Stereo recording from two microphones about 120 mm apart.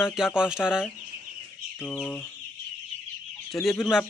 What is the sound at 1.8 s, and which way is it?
Speech, 10° left (ahead or behind).